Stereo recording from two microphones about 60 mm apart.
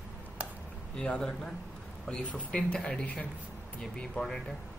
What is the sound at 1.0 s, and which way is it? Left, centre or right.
A man's voice, centre.